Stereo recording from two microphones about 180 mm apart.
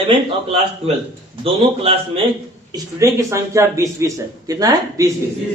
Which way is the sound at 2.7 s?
15° right (ahead or behind).